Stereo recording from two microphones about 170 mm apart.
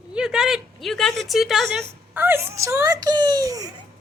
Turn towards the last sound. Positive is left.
turn(degrees=-20)  # may be behind; listen again after turning